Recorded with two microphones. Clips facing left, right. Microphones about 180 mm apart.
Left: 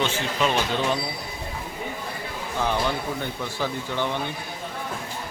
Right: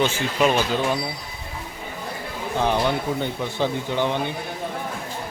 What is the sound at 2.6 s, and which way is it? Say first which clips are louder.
Speech: right 4 dB; 20° right (ahead or behind).